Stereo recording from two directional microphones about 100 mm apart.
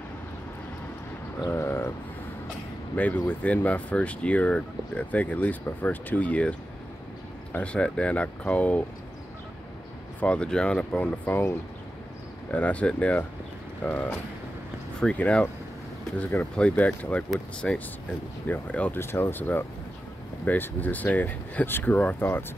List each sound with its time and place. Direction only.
1.5 s vehicle: 25° left (ahead or behind)
3.0 s speech: 15° left (ahead or behind)
7.5 s speech: 10° left (ahead or behind)
10.2 s speech: 10° left (ahead or behind)
16.2 s speech: 25° left (ahead or behind)
16.5 s speech: 10° left (ahead or behind)